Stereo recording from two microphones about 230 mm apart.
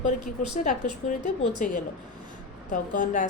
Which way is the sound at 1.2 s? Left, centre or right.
Left.